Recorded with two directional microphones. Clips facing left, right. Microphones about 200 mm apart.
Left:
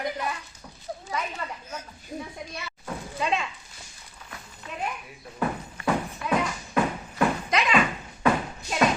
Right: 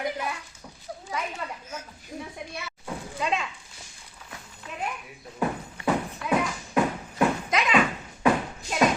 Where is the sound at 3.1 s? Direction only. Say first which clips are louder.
Left 1 dB; centre (ahead or behind).